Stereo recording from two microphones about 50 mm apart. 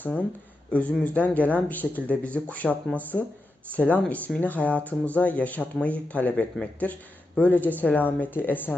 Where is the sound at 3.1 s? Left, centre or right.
Centre.